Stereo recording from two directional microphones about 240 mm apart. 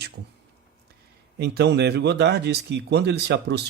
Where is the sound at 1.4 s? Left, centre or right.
Right.